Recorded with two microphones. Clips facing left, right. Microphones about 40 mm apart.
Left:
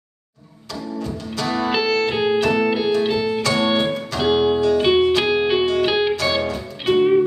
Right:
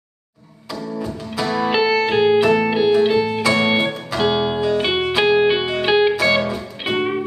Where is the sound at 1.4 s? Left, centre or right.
Centre.